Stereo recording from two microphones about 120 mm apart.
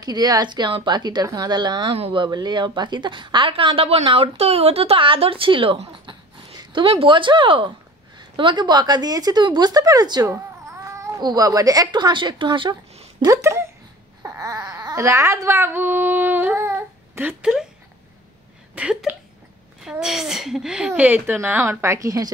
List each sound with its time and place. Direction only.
0.0 s speech: 35° right (ahead or behind)
2.0 s speech: 55° right (ahead or behind)
2.2 s a woman's voice: 35° right (ahead or behind)
13.2 s speech: 25° right (ahead or behind)
14.2 s baby cry: 30° right (ahead or behind)
17.4 s speech: 5° right (ahead or behind)
18.8 s a woman's voice: 10° right (ahead or behind); by 22.3 s 25° right (ahead or behind)